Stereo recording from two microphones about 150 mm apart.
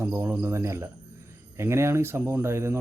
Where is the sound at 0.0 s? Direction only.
15° right (ahead or behind).